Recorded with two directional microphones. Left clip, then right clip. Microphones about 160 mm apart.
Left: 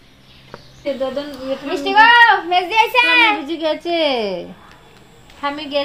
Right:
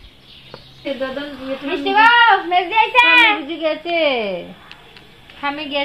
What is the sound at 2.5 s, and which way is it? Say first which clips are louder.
Speech: even; 60° left (ahead or behind).